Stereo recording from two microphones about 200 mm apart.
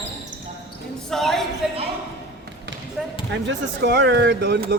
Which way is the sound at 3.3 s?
60° right (ahead or behind).